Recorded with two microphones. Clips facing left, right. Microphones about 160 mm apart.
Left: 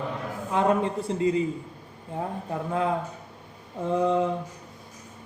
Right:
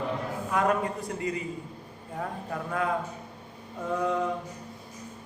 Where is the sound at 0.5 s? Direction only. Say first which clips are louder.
Left 3 dB; 25° left (ahead or behind).